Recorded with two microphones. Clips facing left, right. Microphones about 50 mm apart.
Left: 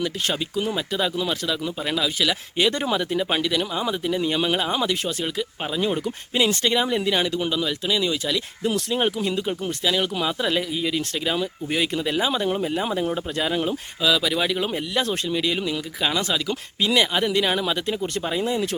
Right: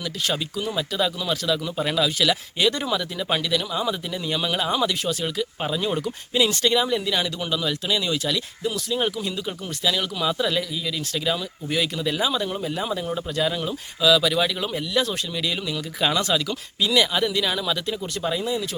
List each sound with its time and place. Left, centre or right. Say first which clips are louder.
0.0 s speech: left 1 dB; left
0.7 s speech: right 4 dB; centre
1.8 s speech: right 2 dB; centre
6.3 s speech: right 1 dB; left
7.6 s speech: left 1 dB; centre
8.6 s speech: left 3 dB; left
9.0 s speech: left 3 dB; left
14.0 s speech: right 3 dB; centre
14.7 s speech: even; left
15.4 s speech: left 3 dB; centre
16.0 s speech: right 3 dB; centre
16.5 s speech: left 1 dB; left
18.4 s speech: left 2 dB; left